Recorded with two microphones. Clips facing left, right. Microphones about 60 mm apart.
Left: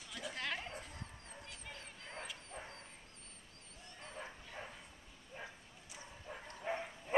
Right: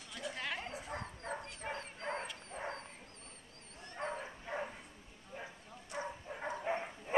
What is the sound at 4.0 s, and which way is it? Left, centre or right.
Bow-wow, right.